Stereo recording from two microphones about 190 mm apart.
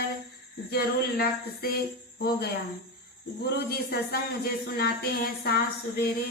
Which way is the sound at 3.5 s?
55° left (ahead or behind).